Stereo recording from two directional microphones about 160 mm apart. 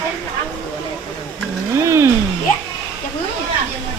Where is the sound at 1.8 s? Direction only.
15° right (ahead or behind).